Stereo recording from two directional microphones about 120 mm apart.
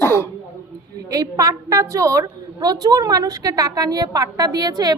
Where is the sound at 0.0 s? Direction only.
25° left (ahead or behind).